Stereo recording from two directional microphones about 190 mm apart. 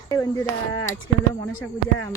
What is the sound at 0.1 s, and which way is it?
Speech, 15° left (ahead or behind).